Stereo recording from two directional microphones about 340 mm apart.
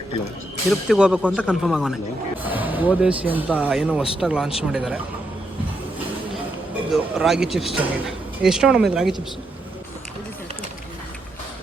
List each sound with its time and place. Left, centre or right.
0.7 s speech: centre
6.9 s speech: centre